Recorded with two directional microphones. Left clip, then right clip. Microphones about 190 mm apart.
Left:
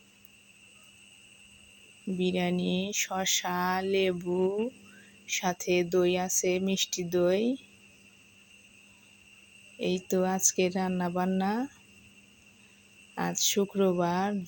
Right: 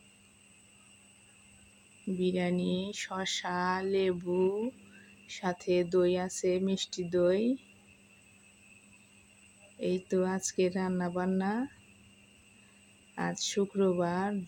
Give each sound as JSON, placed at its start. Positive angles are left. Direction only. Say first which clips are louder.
{"t": 2.1, "sound": "speech", "louder": "left 2 dB", "side_deg": 10}
{"t": 9.7, "sound": "speech", "louder": "left 2 dB", "side_deg": 10}
{"t": 13.1, "sound": "speech", "louder": "left 4 dB", "side_deg": 15}